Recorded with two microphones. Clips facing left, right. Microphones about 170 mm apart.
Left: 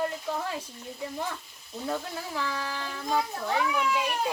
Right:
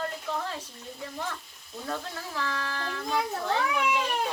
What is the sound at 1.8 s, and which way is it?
A child's voice, 15° left (ahead or behind).